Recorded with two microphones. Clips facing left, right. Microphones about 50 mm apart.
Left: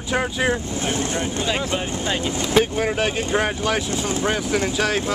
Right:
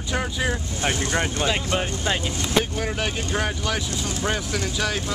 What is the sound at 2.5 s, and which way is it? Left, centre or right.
Speech, centre.